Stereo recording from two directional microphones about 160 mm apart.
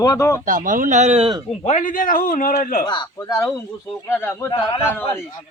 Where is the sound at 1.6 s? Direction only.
50° left (ahead or behind).